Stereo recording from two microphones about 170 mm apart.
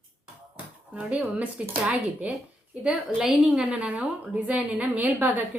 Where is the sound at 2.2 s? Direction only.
10° right (ahead or behind).